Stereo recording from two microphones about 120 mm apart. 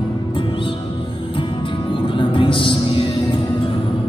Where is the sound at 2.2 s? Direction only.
45° left (ahead or behind).